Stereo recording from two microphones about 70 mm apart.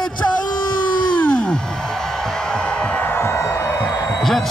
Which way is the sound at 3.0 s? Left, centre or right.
Left.